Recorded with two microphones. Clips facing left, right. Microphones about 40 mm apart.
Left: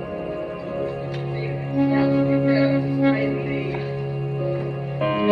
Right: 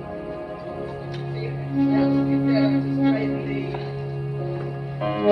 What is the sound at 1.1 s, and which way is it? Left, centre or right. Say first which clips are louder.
Music: left 3 dB; left.